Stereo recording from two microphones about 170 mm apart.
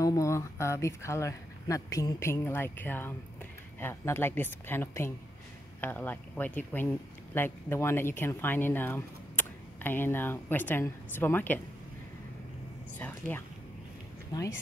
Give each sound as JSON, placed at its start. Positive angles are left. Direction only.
{"t": 0.0, "sound": "speech", "side_deg": 20}
{"t": 14.3, "sound": "a woman's voice", "side_deg": 25}